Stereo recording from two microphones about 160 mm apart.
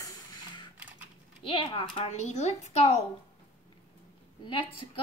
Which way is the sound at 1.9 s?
45° left (ahead or behind).